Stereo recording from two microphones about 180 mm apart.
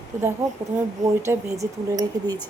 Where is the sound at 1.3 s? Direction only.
15° right (ahead or behind).